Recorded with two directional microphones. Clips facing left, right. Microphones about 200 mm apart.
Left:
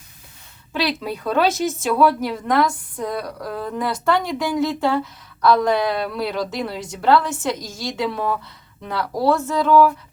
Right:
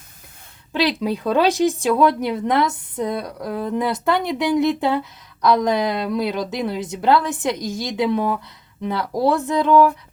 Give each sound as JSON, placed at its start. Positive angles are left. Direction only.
{"t": 0.7, "sound": "speech", "side_deg": -15}